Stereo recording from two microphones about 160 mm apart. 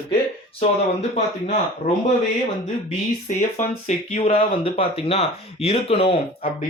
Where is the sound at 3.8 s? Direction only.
40° left (ahead or behind).